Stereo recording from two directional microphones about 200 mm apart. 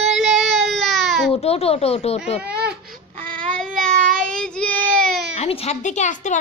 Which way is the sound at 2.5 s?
55° right (ahead or behind).